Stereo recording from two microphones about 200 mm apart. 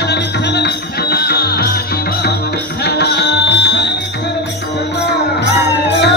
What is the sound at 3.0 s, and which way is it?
Music, 55° left (ahead or behind).